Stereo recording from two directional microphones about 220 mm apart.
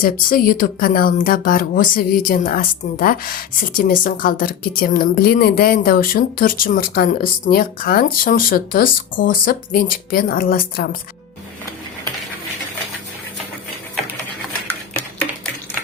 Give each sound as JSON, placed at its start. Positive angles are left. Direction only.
{"t": 0.0, "sound": "speech", "side_deg": 40}